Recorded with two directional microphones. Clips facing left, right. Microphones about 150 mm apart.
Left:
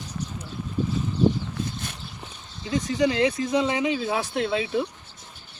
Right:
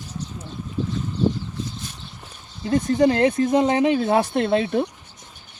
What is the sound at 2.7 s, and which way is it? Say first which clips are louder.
Speech: right 5 dB; 55° right (ahead or behind).